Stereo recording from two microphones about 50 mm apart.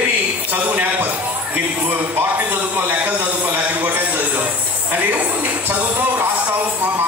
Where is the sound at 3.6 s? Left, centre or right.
Right.